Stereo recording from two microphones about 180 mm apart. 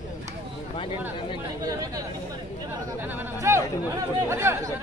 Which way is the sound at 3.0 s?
10° right (ahead or behind).